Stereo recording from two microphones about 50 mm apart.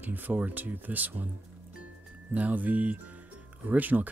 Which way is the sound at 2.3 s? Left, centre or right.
Right.